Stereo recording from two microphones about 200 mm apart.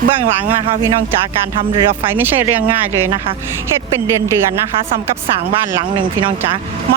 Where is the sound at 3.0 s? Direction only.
20° right (ahead or behind).